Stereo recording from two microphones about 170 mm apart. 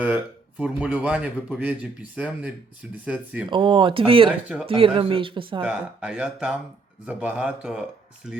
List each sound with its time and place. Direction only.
0.6 s speech: 10° right (ahead or behind)
3.5 s speech: 30° right (ahead or behind)
5.6 s speech: 5° right (ahead or behind)